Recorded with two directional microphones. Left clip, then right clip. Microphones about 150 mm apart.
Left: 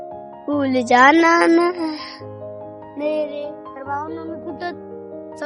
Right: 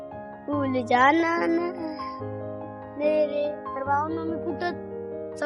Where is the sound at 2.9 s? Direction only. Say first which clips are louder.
Left 1 dB; 40° left (ahead or behind).